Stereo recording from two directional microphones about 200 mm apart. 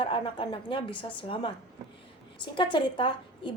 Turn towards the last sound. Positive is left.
turn(degrees=25)  # may be behind; listen again after turning